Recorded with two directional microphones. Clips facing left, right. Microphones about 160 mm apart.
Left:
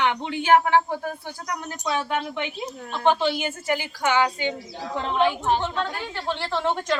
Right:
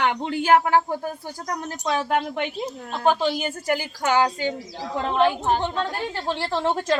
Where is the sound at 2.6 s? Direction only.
5° right (ahead or behind).